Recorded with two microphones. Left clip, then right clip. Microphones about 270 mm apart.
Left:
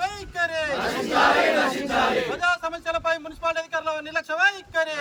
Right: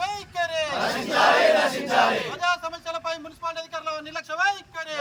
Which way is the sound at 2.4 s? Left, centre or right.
Centre.